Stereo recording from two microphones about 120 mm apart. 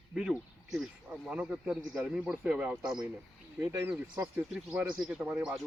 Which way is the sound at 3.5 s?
20° right (ahead or behind).